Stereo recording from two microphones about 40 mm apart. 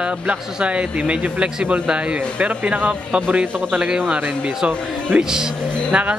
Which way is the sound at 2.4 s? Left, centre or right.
Right.